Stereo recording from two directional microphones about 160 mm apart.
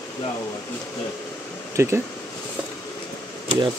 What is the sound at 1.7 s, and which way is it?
Speech, 15° right (ahead or behind).